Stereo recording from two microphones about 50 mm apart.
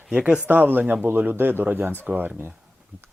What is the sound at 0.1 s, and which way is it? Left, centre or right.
Speech, right.